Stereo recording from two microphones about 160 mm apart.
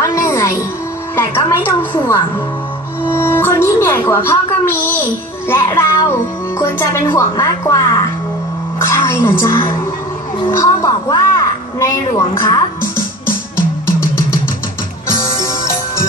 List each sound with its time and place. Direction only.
0.0 s music: 20° left (ahead or behind)
1.1 s speech: 15° left (ahead or behind)
3.2 s a woman's voice: 15° left (ahead or behind)
15.0 s music: 20° left (ahead or behind)